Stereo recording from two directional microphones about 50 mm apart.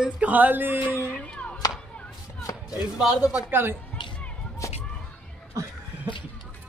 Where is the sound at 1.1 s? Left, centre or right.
Left.